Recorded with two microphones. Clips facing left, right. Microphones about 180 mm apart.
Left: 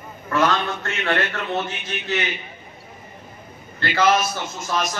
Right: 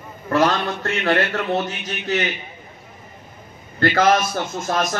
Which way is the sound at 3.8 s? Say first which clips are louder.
Right 3 dB; 50° right (ahead or behind).